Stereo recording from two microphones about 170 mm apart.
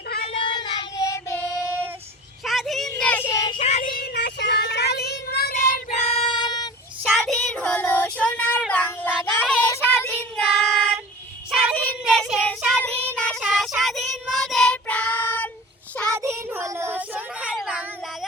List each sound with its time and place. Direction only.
0.4 s child singing: 30° left (ahead or behind)
2.4 s a sound: centre (ahead or behind)
2.9 s child singing: 10° left (ahead or behind)
3.6 s child singing: 40° left (ahead or behind)
3.9 s child singing: 70° left (ahead or behind)
6.0 s child singing: 35° left (ahead or behind)
7.0 s child singing: centre (ahead or behind)
16.1 s child singing: 15° right (ahead or behind)